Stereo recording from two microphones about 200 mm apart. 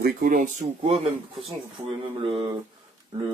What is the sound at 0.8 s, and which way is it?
Speech, 25° right (ahead or behind).